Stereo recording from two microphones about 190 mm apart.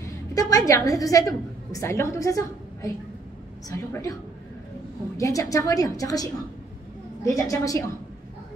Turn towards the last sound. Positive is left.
turn(degrees=15)  # may be behind; listen again after turning